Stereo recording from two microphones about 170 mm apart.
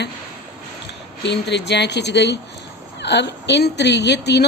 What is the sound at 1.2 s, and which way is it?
A woman's voice, 90° left.